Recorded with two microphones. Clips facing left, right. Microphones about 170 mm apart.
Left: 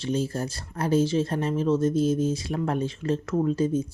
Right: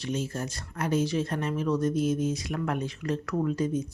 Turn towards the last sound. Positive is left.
turn(degrees=30)  # may be behind; listen again after turning